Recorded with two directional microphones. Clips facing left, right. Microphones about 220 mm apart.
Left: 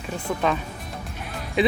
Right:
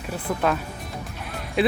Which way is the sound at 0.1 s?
5° right (ahead or behind).